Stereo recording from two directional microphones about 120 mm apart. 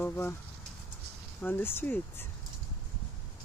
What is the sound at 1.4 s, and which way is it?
Speech, 15° left (ahead or behind).